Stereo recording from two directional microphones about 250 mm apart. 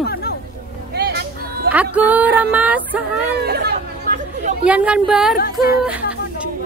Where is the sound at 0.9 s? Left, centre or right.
Right.